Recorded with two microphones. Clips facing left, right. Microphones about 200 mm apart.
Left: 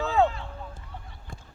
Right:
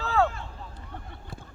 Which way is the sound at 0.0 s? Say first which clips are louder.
Left 2 dB; 20° left (ahead or behind).